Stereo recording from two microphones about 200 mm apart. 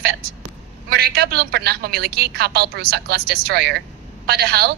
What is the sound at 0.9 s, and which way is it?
A woman's voice, 50° right (ahead or behind).